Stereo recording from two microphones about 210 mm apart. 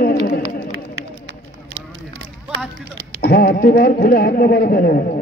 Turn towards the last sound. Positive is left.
turn(degrees=45)  # may be behind; listen again after turning